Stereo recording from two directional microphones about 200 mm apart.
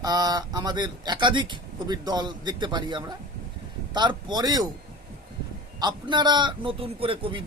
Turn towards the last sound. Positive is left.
turn(degrees=-25)  # may be behind; listen again after turning